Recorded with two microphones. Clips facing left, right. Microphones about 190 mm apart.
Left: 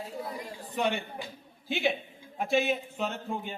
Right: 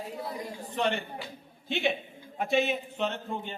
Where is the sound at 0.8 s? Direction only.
10° left (ahead or behind).